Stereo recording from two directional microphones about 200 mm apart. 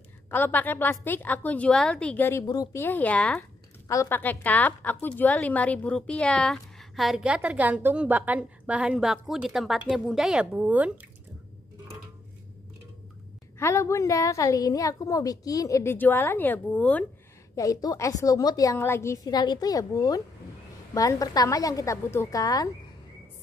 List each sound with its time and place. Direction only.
0.3 s a woman's voice: 10° left (ahead or behind); by 11.1 s 10° right (ahead or behind)
13.6 s a woman's voice: 15° left (ahead or behind)
17.6 s a woman's voice: 20° left (ahead or behind)